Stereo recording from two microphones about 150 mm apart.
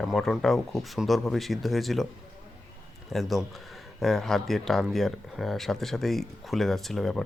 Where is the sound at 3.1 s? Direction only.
Centre (ahead or behind).